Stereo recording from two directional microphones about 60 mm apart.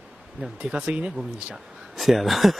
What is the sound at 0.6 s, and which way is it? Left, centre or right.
Speech, centre.